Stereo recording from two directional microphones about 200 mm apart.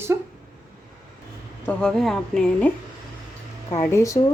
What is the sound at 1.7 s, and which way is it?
A woman's voice, 5° left (ahead or behind).